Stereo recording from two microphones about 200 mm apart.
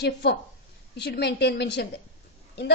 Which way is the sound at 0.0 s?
55° left (ahead or behind).